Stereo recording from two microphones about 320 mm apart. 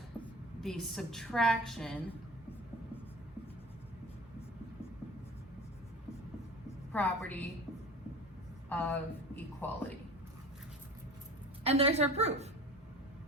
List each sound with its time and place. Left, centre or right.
0.6 s a woman's voice: centre
6.9 s a woman's voice: centre
8.7 s speech: centre
11.6 s a woman's voice: centre